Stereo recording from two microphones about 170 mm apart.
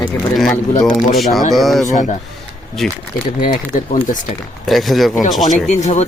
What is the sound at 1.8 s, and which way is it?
Speech, 45° left (ahead or behind).